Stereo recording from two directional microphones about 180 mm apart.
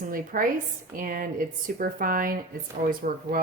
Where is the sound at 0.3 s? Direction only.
50° right (ahead or behind).